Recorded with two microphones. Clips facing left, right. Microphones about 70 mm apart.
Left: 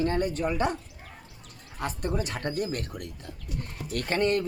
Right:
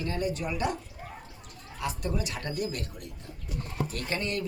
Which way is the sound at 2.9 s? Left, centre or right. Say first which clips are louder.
Left 4 dB; left.